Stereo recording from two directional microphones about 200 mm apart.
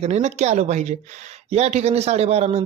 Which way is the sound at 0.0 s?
35° right (ahead or behind).